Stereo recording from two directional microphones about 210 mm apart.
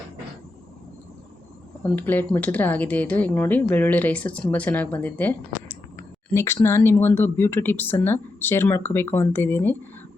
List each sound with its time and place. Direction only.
1.8 s speech: 10° left (ahead or behind)